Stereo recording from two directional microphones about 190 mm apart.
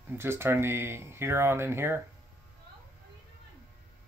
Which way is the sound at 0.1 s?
10° right (ahead or behind).